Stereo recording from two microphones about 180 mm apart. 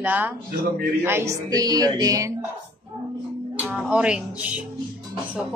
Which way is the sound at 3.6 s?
5° right (ahead or behind).